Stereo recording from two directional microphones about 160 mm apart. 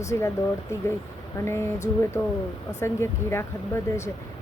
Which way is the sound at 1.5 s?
15° left (ahead or behind).